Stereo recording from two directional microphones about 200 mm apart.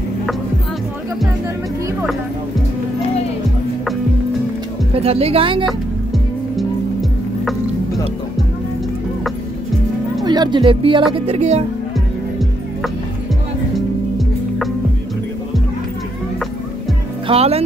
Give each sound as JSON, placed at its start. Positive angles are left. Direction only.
{"t": 4.9, "sound": "speech", "side_deg": -30}
{"t": 5.7, "sound": "music", "side_deg": 0}
{"t": 10.2, "sound": "speech", "side_deg": -20}
{"t": 11.1, "sound": "music", "side_deg": -30}
{"t": 13.7, "sound": "music", "side_deg": 0}
{"t": 17.3, "sound": "music", "side_deg": -30}